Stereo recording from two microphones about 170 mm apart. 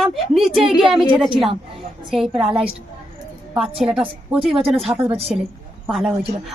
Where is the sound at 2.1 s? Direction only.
Centre (ahead or behind).